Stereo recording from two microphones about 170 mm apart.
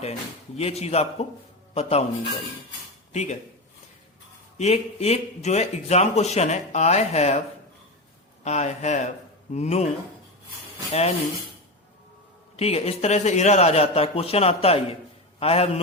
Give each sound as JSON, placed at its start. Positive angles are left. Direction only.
{"t": 0.0, "sound": "speech", "side_deg": 40}
{"t": 3.1, "sound": "speech", "side_deg": 40}
{"t": 4.5, "sound": "speech", "side_deg": 40}
{"t": 8.4, "sound": "speech", "side_deg": 40}
{"t": 12.5, "sound": "speech", "side_deg": 35}